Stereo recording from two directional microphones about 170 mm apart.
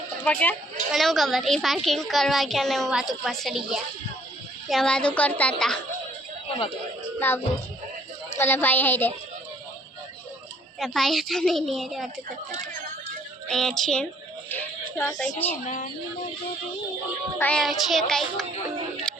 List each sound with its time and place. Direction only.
0.2 s speech: 10° left (ahead or behind)
0.9 s a child's voice: centre (ahead or behind)
7.2 s a woman's voice: 15° left (ahead or behind)
10.8 s a child's voice: centre (ahead or behind)
13.5 s a child's voice: centre (ahead or behind)
15.6 s speech: 45° left (ahead or behind)
17.3 s a child's voice: 5° left (ahead or behind)
19.1 s music: 5° left (ahead or behind)